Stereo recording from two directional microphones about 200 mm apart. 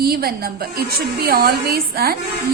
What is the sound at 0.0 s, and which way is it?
A woman's voice, 50° right (ahead or behind).